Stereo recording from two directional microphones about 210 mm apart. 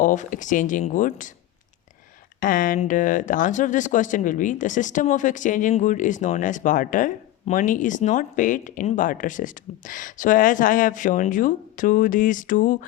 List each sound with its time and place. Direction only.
0.0 s speech: 35° left (ahead or behind)
2.4 s speech: 40° left (ahead or behind)